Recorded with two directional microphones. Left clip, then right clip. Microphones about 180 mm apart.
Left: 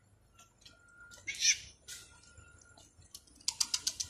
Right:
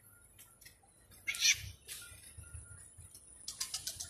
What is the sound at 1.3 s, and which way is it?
Cat, 25° left (ahead or behind).